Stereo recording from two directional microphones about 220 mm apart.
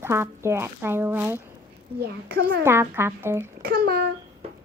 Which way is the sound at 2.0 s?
45° right (ahead or behind).